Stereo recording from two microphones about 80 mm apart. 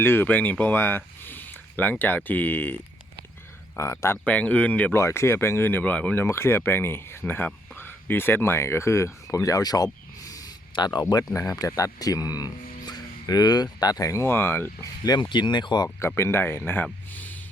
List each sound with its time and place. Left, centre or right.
0.0 s speech: left
3.8 s speech: left
4.3 s speech: centre
4.9 s speech: left; by 6.1 s centre
6.1 s speech: left
9.3 s a sound: left
10.8 s speech: left
14.1 s speech: left
15.0 s speech: left
16.0 s speech: left